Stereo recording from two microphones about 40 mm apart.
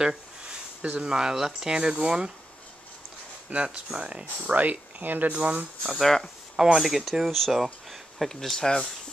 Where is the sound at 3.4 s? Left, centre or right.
Right.